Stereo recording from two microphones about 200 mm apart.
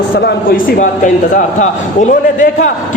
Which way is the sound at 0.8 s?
35° left (ahead or behind).